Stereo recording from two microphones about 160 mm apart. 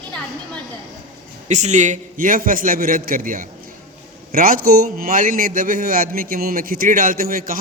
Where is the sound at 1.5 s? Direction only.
45° right (ahead or behind).